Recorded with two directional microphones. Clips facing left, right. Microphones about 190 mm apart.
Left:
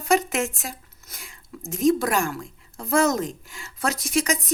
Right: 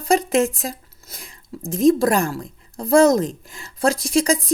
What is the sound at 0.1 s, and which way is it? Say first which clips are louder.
Speech: right 5 dB; 35° right (ahead or behind).